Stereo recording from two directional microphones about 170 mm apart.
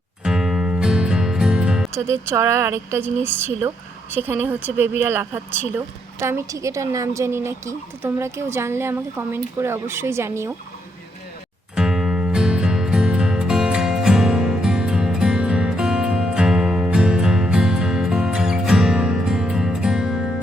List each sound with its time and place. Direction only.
0.3 s music: 5° right (ahead or behind)
2.0 s a woman's voice: 15° right (ahead or behind)
11.7 s music: 5° right (ahead or behind)